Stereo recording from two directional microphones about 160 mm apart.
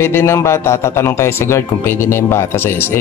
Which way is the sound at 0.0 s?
15° left (ahead or behind).